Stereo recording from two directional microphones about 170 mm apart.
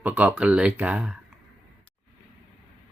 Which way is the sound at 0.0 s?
10° right (ahead or behind).